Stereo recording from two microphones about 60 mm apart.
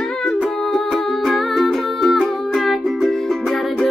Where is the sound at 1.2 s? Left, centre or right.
Centre.